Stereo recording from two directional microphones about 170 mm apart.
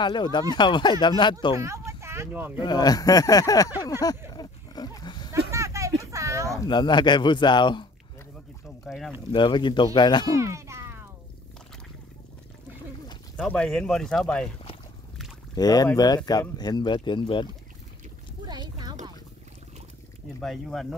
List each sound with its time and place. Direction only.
0.0 s a man's voice: 25° left (ahead or behind)
1.6 s speech: 15° right (ahead or behind)
2.6 s a man's voice: 25° left (ahead or behind)
4.3 s pig: 25° left (ahead or behind)
5.5 s a sound: 15° right (ahead or behind)
6.6 s a man's voice: 25° left (ahead or behind)
8.8 s speech: centre (ahead or behind)
9.3 s a man's voice: 30° left (ahead or behind)
10.3 s a sound: 15° right (ahead or behind)
13.4 s speech: 5° left (ahead or behind)
15.5 s a man's voice: 20° left (ahead or behind)
18.5 s a sound: 25° right (ahead or behind)
20.3 s speech: centre (ahead or behind)